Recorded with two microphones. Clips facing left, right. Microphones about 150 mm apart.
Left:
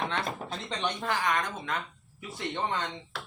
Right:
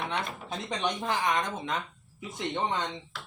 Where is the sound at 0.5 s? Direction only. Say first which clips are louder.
Right 5 dB; 15° right (ahead or behind).